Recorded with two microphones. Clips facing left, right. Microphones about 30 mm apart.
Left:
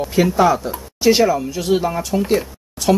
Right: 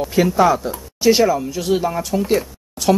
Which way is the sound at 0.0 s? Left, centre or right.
Centre.